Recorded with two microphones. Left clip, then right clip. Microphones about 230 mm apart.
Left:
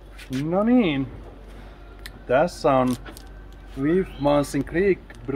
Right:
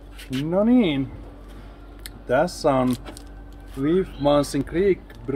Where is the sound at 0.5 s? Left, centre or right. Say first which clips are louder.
Right 1 dB; centre.